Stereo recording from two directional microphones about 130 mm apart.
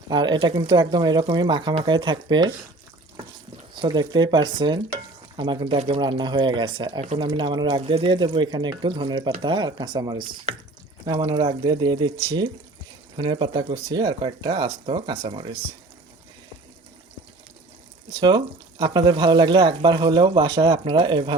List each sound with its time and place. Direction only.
0.1 s speech: 35° right (ahead or behind)
3.8 s speech: 35° right (ahead or behind)
5.7 s speech: 55° right (ahead or behind)
6.0 s speech: 35° right (ahead or behind)
18.2 s speech: 35° right (ahead or behind)